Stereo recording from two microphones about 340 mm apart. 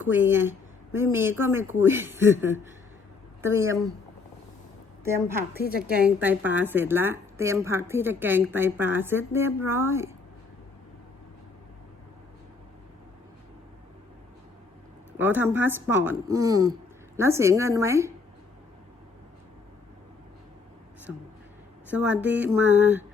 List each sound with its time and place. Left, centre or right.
0.0 s a woman's voice: centre
5.0 s a woman's voice: centre
5.5 s a woman's voice: left
6.0 s a woman's voice: centre
15.2 s a woman's voice: centre
21.8 s speech: centre